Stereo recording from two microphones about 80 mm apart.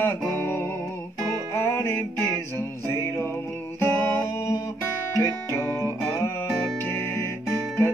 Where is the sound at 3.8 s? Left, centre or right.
Left.